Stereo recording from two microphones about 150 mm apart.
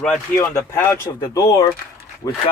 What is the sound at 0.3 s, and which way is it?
Speech, 20° left (ahead or behind).